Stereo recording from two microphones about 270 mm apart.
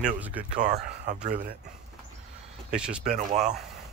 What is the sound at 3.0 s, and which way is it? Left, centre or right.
Speech, right.